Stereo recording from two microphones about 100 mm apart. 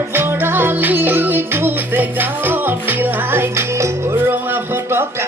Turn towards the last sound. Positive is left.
turn(degrees=-25)  # may be behind; listen again after turning